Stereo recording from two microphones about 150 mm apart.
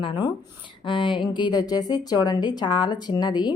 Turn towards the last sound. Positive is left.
turn(degrees=30)  # may be behind; listen again after turning